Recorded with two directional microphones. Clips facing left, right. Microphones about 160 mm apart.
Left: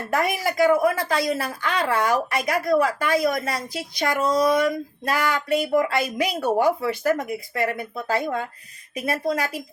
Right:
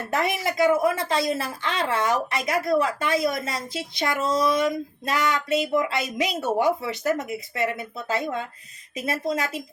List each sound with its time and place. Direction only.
0.1 s speech: 25° right (ahead or behind)